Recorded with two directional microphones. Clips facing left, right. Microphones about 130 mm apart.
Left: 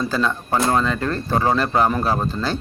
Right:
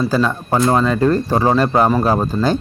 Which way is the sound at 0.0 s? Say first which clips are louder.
Right 5 dB; 10° right (ahead or behind).